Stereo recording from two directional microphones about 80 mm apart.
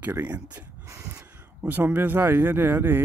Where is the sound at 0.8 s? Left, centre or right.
Right.